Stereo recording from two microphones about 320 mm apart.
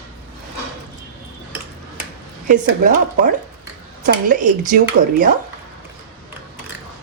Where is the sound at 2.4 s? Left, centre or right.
Right.